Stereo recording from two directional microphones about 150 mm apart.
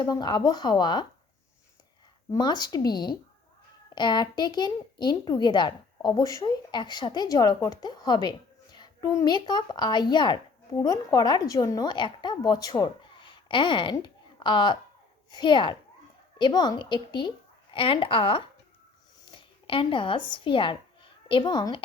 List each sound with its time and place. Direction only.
0.0 s a child's voice: 30° left (ahead or behind)
2.3 s a child's voice: 25° left (ahead or behind)